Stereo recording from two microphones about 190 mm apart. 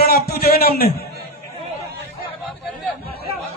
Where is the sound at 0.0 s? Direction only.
55° left (ahead or behind).